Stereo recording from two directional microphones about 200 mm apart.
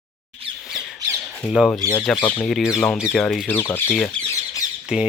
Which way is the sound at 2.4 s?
Centre (ahead or behind).